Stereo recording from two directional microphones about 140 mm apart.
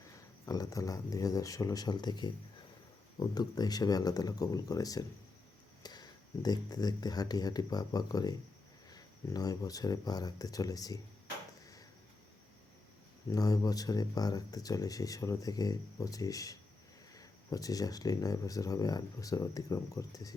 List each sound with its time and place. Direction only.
0.4 s speech: 25° left (ahead or behind)
13.3 s speech: 25° left (ahead or behind)